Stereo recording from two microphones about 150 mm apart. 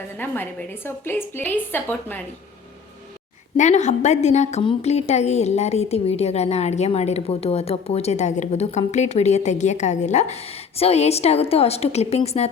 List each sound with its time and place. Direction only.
0.2 s a woman's voice: 15° left (ahead or behind)
3.6 s a woman's voice: 50° left (ahead or behind)